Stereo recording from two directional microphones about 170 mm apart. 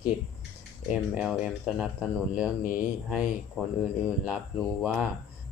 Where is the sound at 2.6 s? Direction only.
50° left (ahead or behind).